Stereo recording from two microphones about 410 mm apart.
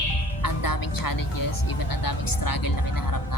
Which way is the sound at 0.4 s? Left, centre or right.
Left.